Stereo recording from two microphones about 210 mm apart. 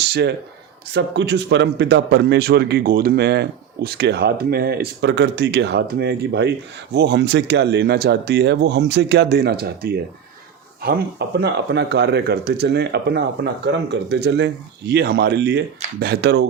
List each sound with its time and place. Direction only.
0.0 s a man's voice: 50° right (ahead or behind)